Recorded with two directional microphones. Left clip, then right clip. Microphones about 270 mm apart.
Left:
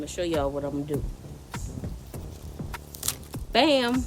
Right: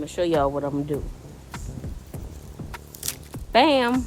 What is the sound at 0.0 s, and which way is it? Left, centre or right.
Speech, centre.